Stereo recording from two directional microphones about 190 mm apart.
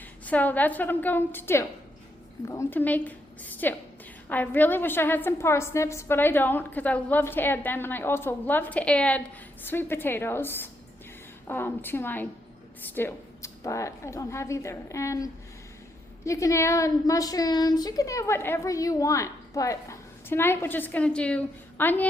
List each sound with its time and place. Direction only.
0.3 s a woman's voice: 10° left (ahead or behind)